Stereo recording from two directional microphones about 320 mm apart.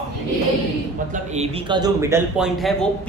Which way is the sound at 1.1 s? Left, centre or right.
Right.